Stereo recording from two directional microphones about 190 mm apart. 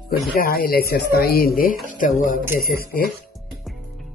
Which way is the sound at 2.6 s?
50° left (ahead or behind).